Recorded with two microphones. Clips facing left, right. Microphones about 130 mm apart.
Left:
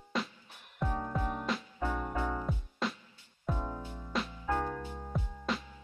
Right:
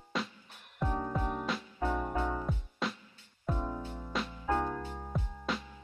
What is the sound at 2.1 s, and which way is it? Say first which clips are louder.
Music: right 1 dB; 15° right (ahead or behind).